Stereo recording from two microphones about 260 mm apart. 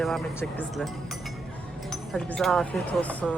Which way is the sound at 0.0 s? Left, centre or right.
Centre.